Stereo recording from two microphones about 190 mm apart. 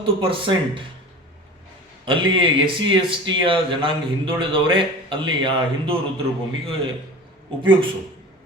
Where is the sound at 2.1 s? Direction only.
25° right (ahead or behind).